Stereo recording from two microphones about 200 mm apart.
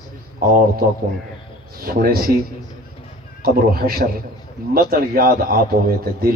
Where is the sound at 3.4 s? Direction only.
50° right (ahead or behind).